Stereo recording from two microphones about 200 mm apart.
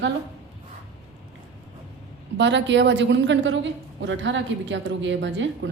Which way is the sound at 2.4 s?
65° right (ahead or behind).